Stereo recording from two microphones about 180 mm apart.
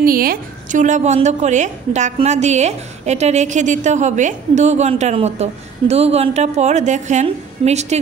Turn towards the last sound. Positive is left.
turn(degrees=-40)  # may be behind; listen again after turning